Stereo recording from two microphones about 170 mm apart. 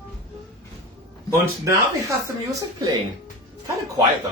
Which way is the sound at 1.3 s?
15° right (ahead or behind).